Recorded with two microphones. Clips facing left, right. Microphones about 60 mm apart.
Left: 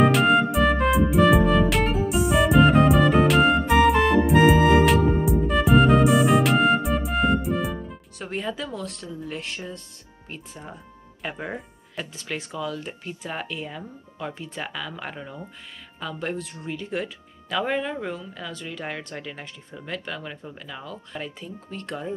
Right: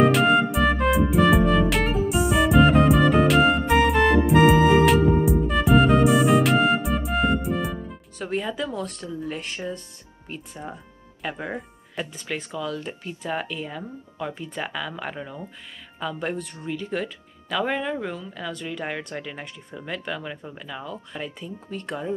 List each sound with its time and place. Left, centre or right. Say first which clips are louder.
0.0 s music: even; centre
8.4 s a sound: right 1 dB; centre
9.0 s speech: right 3 dB; centre
10.2 s speech: right 3 dB; centre
17.6 s speech: even; centre
17.8 s speech: right 1 dB; centre